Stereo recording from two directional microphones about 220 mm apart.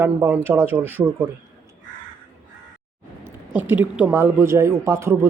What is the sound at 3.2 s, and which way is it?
A man's voice, 10° right (ahead or behind).